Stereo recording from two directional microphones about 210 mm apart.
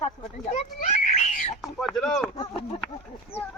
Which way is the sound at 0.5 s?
35° left (ahead or behind).